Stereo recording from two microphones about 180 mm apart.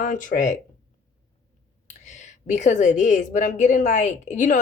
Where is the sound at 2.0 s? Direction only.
40° left (ahead or behind).